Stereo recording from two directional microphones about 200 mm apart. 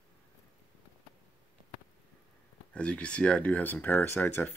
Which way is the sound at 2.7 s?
5° left (ahead or behind).